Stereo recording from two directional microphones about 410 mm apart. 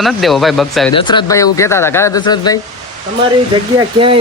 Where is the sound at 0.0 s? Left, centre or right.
Centre.